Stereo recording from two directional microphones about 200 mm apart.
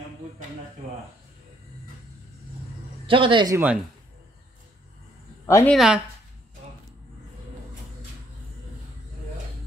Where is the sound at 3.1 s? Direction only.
25° right (ahead or behind).